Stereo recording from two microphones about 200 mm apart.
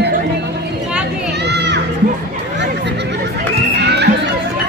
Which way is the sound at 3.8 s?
55° right (ahead or behind).